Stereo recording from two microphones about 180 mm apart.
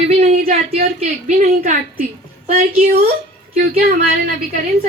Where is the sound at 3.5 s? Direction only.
60° right (ahead or behind).